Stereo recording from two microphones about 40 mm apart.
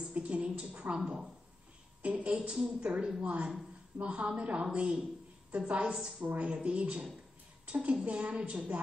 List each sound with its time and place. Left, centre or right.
0.1 s a woman's voice: right
6.1 s a woman's voice: right
6.4 s a woman's voice: right